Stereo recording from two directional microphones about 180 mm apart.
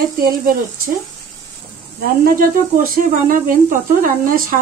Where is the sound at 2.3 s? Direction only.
50° right (ahead or behind).